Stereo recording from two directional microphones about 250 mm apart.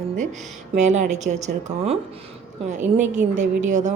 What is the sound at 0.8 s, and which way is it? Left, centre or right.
Speech, right.